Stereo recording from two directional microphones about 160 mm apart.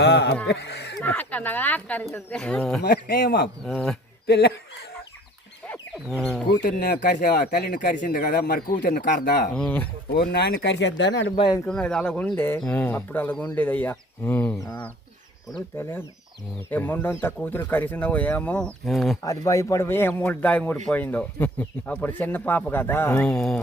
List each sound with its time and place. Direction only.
0.0 s speech: 90° left
1.0 s speech: 10° left (ahead or behind)
2.8 s speech: 65° left (ahead or behind)
3.6 s speech: centre (ahead or behind)
4.3 s speech: 90° left
6.1 s speech: centre (ahead or behind)
6.6 s speech: 65° left (ahead or behind)
9.6 s speech: 10° left (ahead or behind)
10.3 s speech: 90° left
11.3 s speech: 25° left (ahead or behind)
11.6 s speech: 5° left (ahead or behind); by 14.8 s 20° left (ahead or behind)
15.8 s speech: 15° left (ahead or behind)
19.2 s speech: 20° left (ahead or behind); by 23.6 s 5° left (ahead or behind)